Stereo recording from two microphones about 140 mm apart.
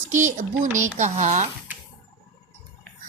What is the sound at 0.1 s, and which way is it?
A woman's voice, 65° right (ahead or behind).